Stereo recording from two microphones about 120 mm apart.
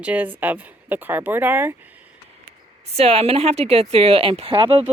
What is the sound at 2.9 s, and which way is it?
Speech, 55° right (ahead or behind).